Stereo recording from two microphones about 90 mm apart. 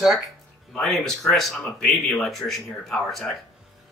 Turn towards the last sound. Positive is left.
turn(degrees=5)  # may be behind; listen again after turning